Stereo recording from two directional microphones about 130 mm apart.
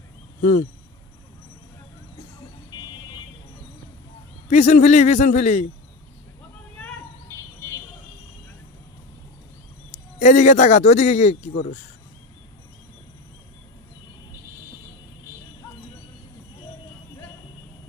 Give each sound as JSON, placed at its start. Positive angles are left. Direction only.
{"t": 0.4, "sound": "speech", "side_deg": 90}
{"t": 4.5, "sound": "speech", "side_deg": 65}
{"t": 10.1, "sound": "speech", "side_deg": 70}